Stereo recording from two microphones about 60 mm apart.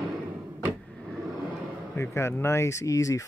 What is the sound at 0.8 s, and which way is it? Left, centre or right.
Vehicle, centre.